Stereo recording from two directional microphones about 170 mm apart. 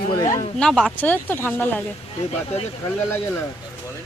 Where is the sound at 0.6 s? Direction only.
Centre (ahead or behind).